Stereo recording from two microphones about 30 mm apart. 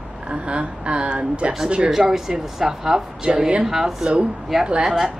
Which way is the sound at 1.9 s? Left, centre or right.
Centre.